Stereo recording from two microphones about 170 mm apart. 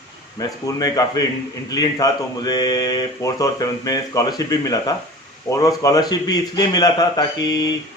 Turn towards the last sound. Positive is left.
turn(degrees=20)  # may be behind; listen again after turning